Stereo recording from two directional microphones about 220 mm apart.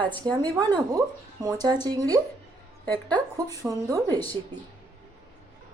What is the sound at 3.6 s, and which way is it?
Speech, 5° right (ahead or behind).